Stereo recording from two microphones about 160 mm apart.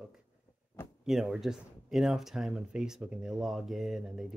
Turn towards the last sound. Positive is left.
turn(degrees=0)  # may be behind; listen again after turning